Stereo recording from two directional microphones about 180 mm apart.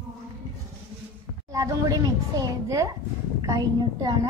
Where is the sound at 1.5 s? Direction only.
20° right (ahead or behind).